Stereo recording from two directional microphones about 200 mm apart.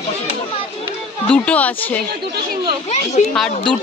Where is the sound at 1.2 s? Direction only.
5° left (ahead or behind).